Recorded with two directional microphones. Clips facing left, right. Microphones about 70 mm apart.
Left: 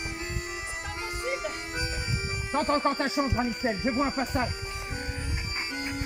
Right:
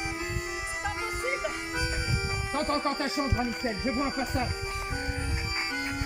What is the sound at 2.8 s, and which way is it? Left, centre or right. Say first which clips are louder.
Speech: left 3 dB; left.